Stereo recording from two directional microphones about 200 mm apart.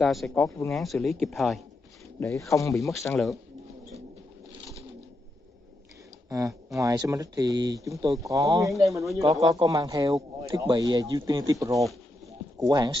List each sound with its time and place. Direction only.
0.0 s speech: centre (ahead or behind)
2.1 s speech: 15° left (ahead or behind)
6.2 s speech: 15° right (ahead or behind)
12.5 s speech: 20° right (ahead or behind)